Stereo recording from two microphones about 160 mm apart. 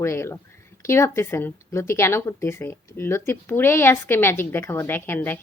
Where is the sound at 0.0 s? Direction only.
15° left (ahead or behind).